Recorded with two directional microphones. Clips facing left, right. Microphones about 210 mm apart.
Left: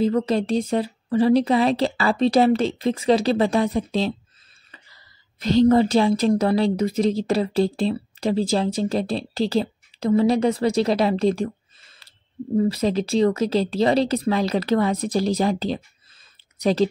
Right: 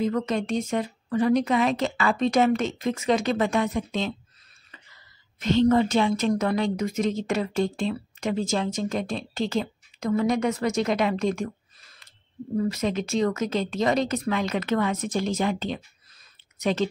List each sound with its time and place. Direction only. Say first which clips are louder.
0.0 s a woman's voice: left 5 dB; 30° left (ahead or behind)